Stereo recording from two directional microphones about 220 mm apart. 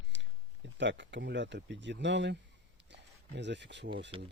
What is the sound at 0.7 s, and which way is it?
Speech, 55° right (ahead or behind).